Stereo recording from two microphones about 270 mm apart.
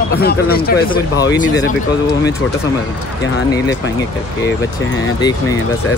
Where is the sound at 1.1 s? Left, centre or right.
Centre.